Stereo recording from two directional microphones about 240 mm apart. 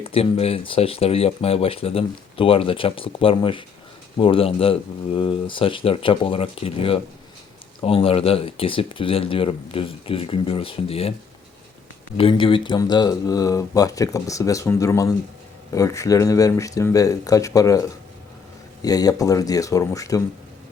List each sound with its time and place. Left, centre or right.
0.0 s speech: left
12.1 s speech: left